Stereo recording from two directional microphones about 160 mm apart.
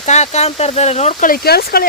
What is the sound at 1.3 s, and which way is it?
Speech, 75° left (ahead or behind).